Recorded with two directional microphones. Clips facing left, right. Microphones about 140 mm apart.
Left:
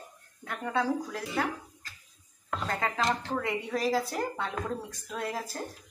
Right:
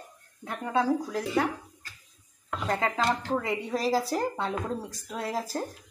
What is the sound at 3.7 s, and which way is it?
A woman's voice, 35° right (ahead or behind).